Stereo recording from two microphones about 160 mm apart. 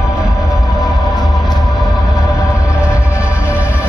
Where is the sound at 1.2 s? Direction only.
Centre (ahead or behind).